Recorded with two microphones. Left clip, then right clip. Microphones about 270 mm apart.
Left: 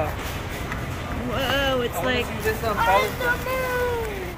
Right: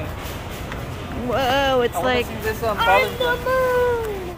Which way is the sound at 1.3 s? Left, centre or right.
Centre.